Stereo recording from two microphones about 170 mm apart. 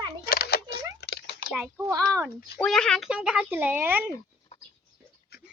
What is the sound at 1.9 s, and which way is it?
Speech, 15° right (ahead or behind).